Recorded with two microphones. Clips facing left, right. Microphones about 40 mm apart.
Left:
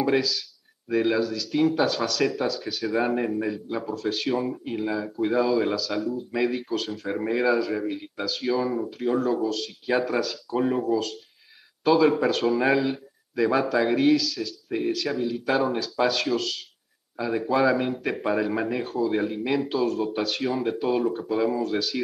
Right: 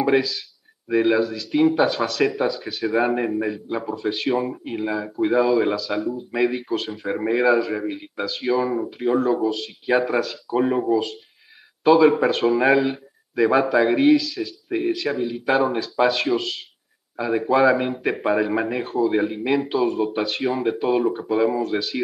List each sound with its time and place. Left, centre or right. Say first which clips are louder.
0.0 s speech: right 4 dB; centre